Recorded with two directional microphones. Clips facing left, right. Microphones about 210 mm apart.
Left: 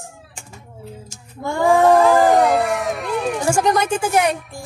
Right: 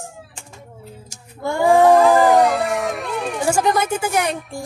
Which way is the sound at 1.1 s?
10° right (ahead or behind).